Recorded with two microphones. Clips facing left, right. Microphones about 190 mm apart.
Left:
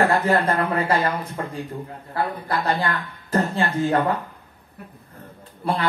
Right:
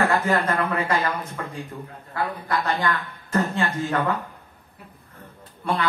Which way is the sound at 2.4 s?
30° left (ahead or behind).